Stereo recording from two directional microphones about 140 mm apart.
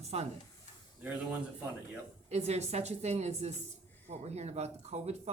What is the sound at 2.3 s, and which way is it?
Speech, 50° right (ahead or behind).